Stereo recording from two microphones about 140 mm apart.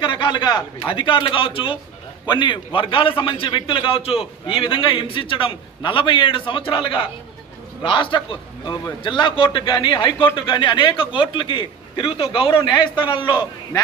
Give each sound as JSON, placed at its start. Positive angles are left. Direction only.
{"t": 0.0, "sound": "a man's voice", "side_deg": 35}